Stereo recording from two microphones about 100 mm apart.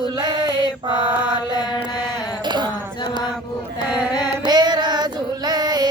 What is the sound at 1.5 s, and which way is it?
Mantra, 45° left (ahead or behind).